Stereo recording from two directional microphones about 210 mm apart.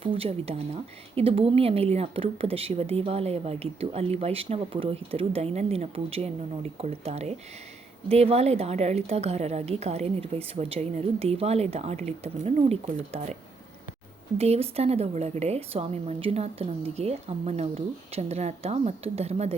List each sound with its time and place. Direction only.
0.0 s a woman's voice: 25° right (ahead or behind)
14.3 s speech: 30° right (ahead or behind)